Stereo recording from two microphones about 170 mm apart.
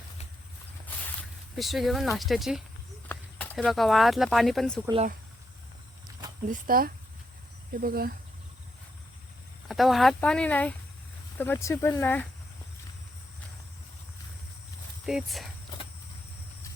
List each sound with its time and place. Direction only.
1.5 s speech: centre (ahead or behind)
3.1 s speech: 10° left (ahead or behind)
6.5 s speech: 55° right (ahead or behind)
9.6 s speech: centre (ahead or behind)
15.0 s speech: centre (ahead or behind)